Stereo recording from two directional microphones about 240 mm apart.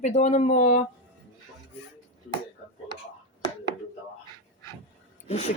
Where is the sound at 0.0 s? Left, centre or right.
Left.